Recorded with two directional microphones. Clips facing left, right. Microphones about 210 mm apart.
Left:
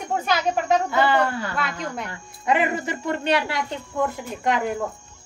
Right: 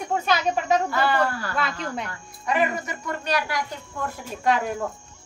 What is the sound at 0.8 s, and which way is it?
A woman's voice, 20° left (ahead or behind).